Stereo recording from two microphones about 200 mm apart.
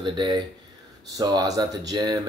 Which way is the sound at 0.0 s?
20° right (ahead or behind).